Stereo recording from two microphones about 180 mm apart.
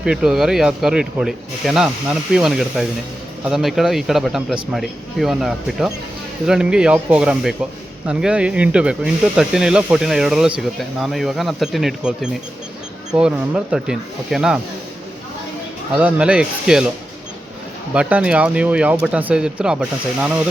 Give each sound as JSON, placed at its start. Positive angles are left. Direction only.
{"t": 0.0, "sound": "speech", "side_deg": -5}
{"t": 16.0, "sound": "speech", "side_deg": -5}
{"t": 17.9, "sound": "speech", "side_deg": -5}